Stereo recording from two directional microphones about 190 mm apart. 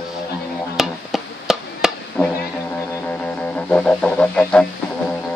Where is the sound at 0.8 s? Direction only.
Centre (ahead or behind).